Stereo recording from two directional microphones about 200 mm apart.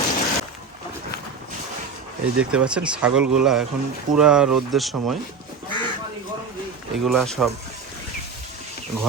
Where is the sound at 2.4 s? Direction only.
5° right (ahead or behind).